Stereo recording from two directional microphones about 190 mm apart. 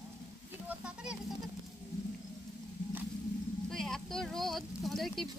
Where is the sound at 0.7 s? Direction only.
5° right (ahead or behind).